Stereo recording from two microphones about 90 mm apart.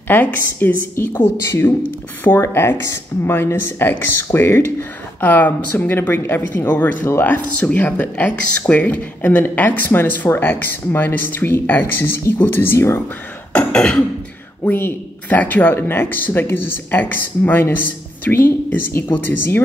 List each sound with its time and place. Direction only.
0.1 s speech: 20° left (ahead or behind)
13.5 s cough: 15° left (ahead or behind)
14.6 s speech: 25° left (ahead or behind)